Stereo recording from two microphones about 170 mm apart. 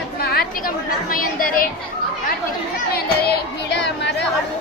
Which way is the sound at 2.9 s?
70° left (ahead or behind).